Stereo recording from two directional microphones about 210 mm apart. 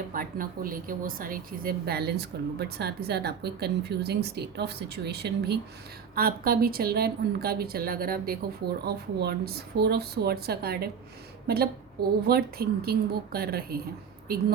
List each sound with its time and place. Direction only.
0.1 s speech: 40° right (ahead or behind)